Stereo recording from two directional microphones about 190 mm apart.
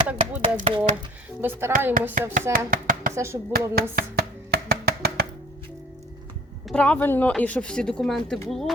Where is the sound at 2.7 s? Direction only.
45° right (ahead or behind).